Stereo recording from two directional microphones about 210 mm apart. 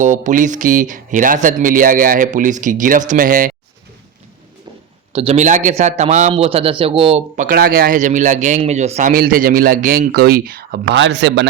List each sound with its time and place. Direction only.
0.0 s a man's voice: 35° right (ahead or behind)
5.1 s a man's voice: 30° right (ahead or behind); by 11.4 s 55° right (ahead or behind)